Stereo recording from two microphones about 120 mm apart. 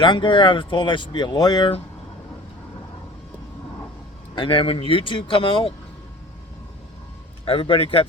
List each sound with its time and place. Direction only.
0.0 s speech: 40° left (ahead or behind)
4.4 s speech: 50° left (ahead or behind)
7.4 s speech: 50° left (ahead or behind)